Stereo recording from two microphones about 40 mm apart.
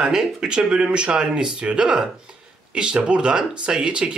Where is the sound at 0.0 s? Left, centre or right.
Centre.